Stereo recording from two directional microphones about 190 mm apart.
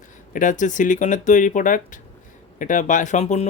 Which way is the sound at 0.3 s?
40° left (ahead or behind).